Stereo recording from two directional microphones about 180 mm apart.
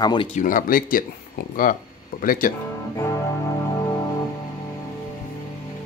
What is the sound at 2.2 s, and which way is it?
Speech, 50° left (ahead or behind).